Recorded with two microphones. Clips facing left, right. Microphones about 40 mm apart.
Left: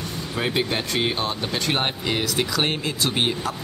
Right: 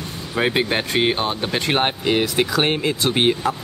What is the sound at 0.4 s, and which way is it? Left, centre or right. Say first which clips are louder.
Speech: right 5 dB; right.